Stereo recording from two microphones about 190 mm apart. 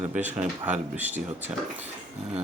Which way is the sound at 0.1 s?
5° right (ahead or behind).